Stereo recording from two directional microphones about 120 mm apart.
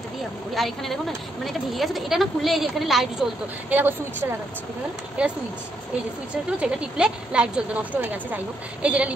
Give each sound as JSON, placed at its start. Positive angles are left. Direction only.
{"t": 0.6, "sound": "a woman's voice", "side_deg": 0}
{"t": 3.7, "sound": "a woman's voice", "side_deg": -15}
{"t": 6.6, "sound": "a woman's voice", "side_deg": -10}